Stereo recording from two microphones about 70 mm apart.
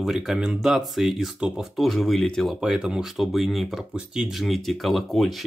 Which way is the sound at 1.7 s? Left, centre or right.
Centre.